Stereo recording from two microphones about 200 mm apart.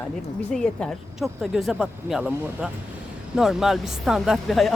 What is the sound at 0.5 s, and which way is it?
Speech, 5° left (ahead or behind).